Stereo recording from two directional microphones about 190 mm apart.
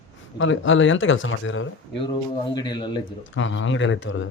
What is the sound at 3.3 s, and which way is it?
Speech, 90° left.